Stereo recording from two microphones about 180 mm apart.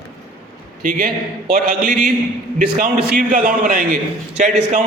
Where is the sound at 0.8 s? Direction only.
55° right (ahead or behind).